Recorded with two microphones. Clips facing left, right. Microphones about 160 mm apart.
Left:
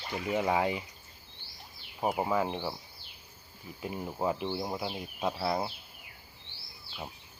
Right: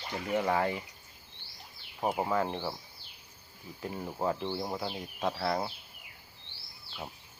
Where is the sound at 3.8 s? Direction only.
15° left (ahead or behind).